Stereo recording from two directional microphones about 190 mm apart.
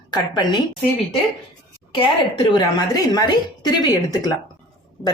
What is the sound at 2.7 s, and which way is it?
Speech, 20° left (ahead or behind).